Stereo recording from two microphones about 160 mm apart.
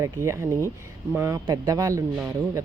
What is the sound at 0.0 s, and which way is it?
Speech, 20° right (ahead or behind).